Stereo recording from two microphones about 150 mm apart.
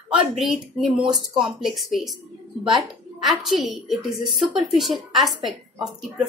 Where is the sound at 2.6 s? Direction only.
30° right (ahead or behind).